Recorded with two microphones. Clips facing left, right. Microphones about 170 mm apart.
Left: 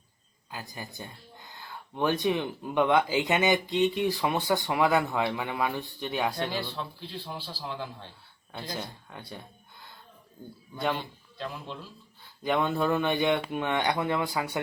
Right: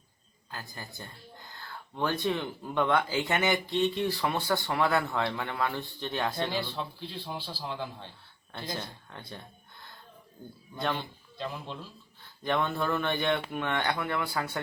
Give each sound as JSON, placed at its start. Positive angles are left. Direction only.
{"t": 0.5, "sound": "speech", "side_deg": 15}
{"t": 10.8, "sound": "speech", "side_deg": 10}
{"t": 12.4, "sound": "speech", "side_deg": 15}